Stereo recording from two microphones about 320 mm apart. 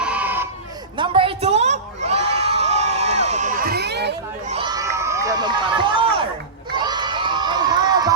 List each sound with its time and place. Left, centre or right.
0.0 s crowd: centre
0.9 s crowd: centre; by 4.5 s right
4.5 s crowd: centre